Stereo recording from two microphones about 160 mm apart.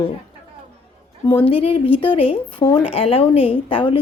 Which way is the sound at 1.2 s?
35° left (ahead or behind).